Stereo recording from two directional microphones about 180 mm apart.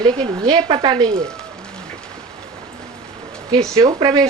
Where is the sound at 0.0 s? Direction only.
25° right (ahead or behind).